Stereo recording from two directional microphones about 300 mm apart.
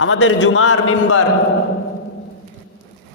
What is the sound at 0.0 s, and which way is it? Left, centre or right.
A man's voice, left.